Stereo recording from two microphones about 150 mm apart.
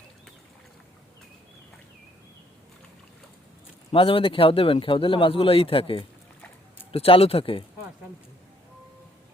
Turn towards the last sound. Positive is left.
turn(degrees=40)  # may be behind; listen again after turning